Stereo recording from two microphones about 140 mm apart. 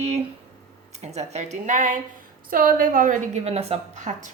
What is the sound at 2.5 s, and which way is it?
Speech, 90° right.